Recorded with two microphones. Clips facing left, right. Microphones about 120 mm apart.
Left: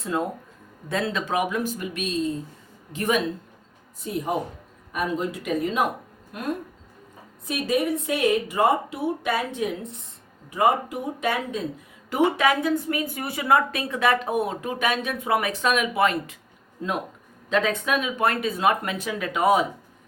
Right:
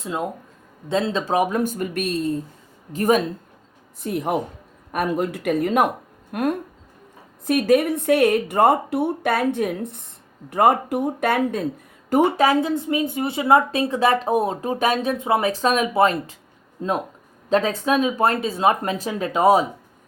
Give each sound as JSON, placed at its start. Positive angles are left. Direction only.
{"t": 0.0, "sound": "speech", "side_deg": -15}
{"t": 2.9, "sound": "speech", "side_deg": -40}
{"t": 4.0, "sound": "speech", "side_deg": -60}
{"t": 12.1, "sound": "speech", "side_deg": -35}